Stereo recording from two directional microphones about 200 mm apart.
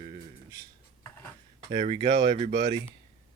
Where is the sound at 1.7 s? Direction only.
25° right (ahead or behind).